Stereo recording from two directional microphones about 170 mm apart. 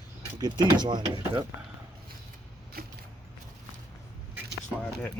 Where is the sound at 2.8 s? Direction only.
65° right (ahead or behind).